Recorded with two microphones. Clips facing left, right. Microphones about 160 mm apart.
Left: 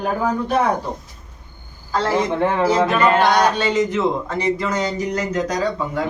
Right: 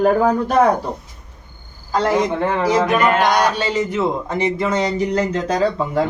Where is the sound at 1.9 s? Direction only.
15° right (ahead or behind).